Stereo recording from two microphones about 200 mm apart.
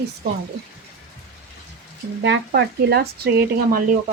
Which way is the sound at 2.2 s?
60° right (ahead or behind).